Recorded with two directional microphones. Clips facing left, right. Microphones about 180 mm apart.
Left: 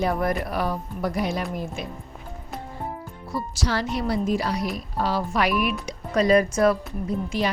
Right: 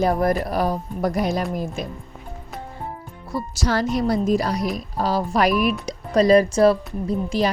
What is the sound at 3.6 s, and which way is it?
A woman's voice, 45° right (ahead or behind).